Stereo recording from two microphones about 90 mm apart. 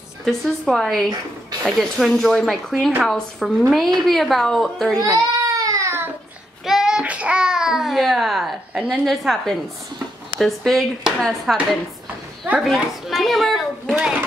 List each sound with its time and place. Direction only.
0.2 s speech: centre (ahead or behind)
4.9 s baby cry: 40° right (ahead or behind)
6.6 s a sound: 5° right (ahead or behind)
9.0 s speech: centre (ahead or behind)
12.6 s a woman's voice: centre (ahead or behind)